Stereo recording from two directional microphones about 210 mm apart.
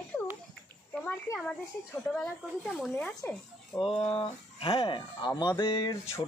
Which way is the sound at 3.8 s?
25° left (ahead or behind).